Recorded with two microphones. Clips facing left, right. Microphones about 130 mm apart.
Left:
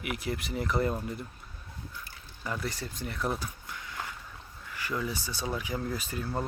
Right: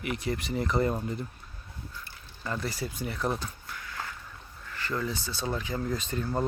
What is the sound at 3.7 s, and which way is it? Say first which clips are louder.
Walk: right 1 dB; 20° left (ahead or behind).